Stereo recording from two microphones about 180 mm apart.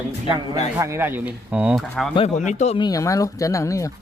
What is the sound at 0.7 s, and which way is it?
A man's voice, 15° right (ahead or behind).